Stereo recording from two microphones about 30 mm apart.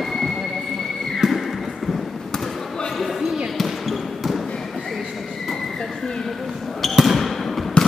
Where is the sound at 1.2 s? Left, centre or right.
Centre.